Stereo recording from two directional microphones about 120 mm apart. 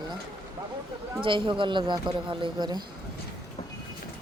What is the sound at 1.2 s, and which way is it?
Speech, 45° right (ahead or behind).